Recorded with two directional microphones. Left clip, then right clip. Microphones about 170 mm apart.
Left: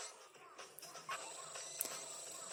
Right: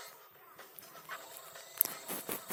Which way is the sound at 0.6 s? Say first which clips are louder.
Even; 40° left (ahead or behind).